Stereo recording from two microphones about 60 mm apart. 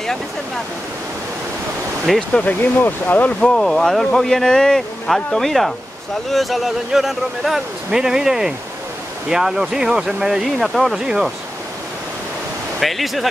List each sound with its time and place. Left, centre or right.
2.1 s speech: centre
2.4 s speech: left
3.3 s speech: centre
12.8 s speech: centre